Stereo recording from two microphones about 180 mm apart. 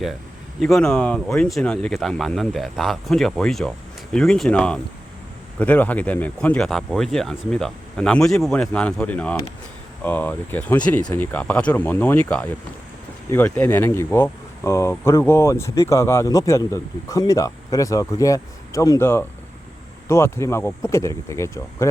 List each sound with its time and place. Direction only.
0.6 s speech: centre (ahead or behind)